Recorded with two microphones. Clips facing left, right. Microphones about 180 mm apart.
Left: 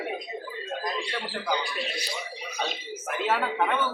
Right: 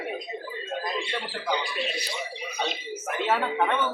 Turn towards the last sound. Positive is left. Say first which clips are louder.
# right 1 dB
turn(degrees=0)  # may be behind; listen again after turning